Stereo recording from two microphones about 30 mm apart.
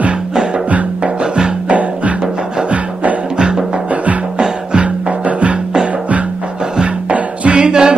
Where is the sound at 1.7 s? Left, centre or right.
Right.